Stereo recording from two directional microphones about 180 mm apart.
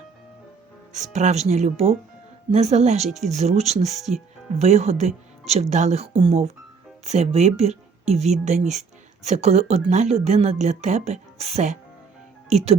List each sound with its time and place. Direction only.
0.9 s speech: 40° right (ahead or behind)